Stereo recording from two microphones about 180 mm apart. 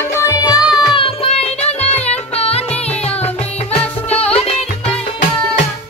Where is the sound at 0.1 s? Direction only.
15° left (ahead or behind).